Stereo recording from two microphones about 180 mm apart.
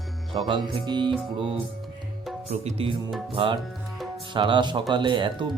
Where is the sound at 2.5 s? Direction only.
35° right (ahead or behind).